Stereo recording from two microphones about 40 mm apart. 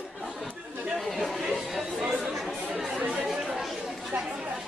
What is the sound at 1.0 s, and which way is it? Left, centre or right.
Chatter, centre.